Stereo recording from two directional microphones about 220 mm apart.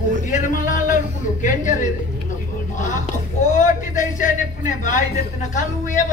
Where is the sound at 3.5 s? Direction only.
35° left (ahead or behind).